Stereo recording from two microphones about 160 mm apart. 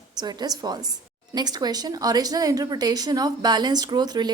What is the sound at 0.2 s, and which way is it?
A woman's voice, 25° right (ahead or behind).